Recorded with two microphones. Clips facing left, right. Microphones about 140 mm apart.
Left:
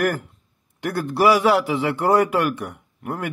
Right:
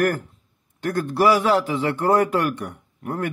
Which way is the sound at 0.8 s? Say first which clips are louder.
Even; 10° left (ahead or behind).